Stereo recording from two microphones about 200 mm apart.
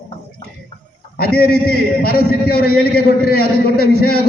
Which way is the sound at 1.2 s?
50° left (ahead or behind).